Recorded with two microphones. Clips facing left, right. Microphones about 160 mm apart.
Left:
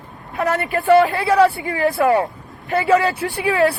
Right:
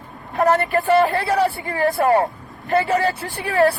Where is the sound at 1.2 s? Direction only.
75° left (ahead or behind).